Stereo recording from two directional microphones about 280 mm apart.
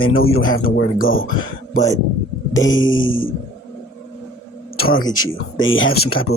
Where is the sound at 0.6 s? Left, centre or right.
Left.